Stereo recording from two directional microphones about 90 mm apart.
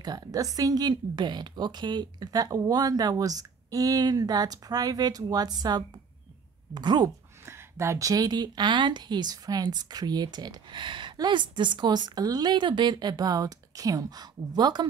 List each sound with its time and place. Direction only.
0.0 s a woman's voice: 45° right (ahead or behind)
7.4 s a woman's voice: 30° right (ahead or behind); by 14.9 s 50° right (ahead or behind)